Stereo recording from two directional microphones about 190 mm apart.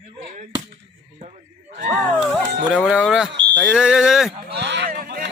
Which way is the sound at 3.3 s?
65° right (ahead or behind).